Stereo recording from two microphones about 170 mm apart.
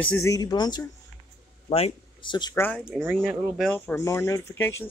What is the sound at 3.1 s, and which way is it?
Speech, 5° right (ahead or behind).